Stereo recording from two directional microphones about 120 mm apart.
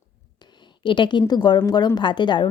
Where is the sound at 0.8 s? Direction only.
40° left (ahead or behind).